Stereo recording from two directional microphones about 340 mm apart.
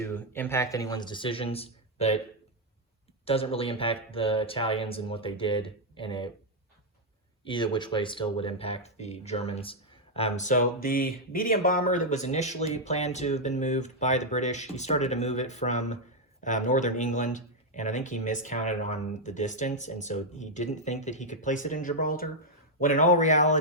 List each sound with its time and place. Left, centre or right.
0.0 s speech: centre
3.2 s speech: centre
7.4 s speech: centre